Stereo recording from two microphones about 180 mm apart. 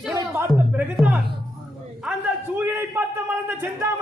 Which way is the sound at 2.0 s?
10° right (ahead or behind).